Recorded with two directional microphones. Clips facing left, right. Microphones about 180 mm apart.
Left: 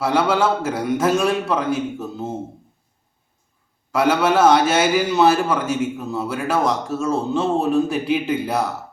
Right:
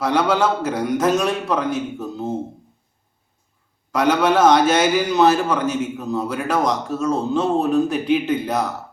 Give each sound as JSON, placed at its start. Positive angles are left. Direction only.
{"t": 0.0, "sound": "a man's voice", "side_deg": 5}
{"t": 3.9, "sound": "a man's voice", "side_deg": 5}